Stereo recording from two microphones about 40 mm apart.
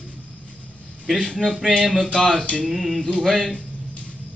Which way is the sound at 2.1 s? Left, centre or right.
Left.